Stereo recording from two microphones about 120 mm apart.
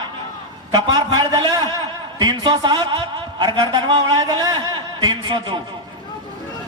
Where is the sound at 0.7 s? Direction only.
30° right (ahead or behind).